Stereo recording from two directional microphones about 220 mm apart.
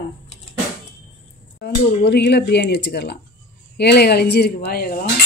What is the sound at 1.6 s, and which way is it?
Speech, 50° left (ahead or behind).